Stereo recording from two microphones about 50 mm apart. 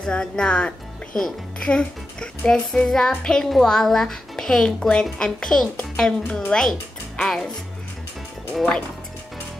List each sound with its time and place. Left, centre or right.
0.0 s speech: centre
1.1 s music: centre